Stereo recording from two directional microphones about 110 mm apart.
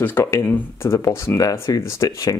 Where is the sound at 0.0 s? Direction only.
20° left (ahead or behind).